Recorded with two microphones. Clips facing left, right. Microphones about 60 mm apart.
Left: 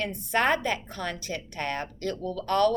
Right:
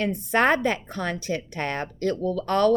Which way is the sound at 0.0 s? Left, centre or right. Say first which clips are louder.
Right 4 dB; right.